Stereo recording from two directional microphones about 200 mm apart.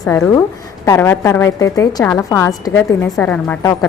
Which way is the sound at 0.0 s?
10° left (ahead or behind).